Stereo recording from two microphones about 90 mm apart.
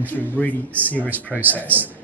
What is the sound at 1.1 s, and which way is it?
Speech, 20° right (ahead or behind).